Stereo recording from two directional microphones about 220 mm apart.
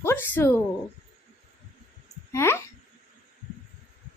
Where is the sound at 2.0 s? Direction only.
10° left (ahead or behind).